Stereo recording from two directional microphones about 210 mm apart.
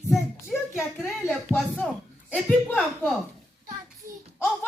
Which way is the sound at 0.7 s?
Centre (ahead or behind).